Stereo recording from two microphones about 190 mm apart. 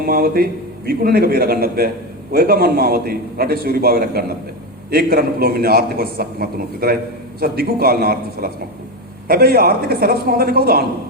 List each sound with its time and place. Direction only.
0.0 s a man's voice: 55° right (ahead or behind)